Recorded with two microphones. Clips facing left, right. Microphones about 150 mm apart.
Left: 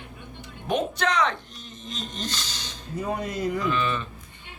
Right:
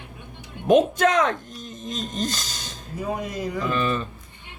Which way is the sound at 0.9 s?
45° right (ahead or behind).